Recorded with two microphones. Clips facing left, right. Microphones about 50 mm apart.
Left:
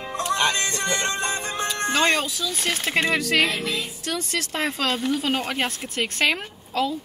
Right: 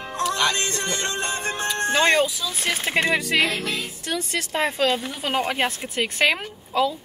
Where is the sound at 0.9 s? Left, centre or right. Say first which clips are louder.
Left 2 dB; left.